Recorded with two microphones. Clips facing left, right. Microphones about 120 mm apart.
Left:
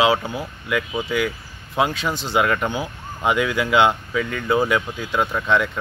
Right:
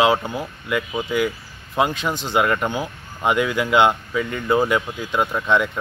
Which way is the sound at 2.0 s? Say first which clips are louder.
Even; 20° right (ahead or behind).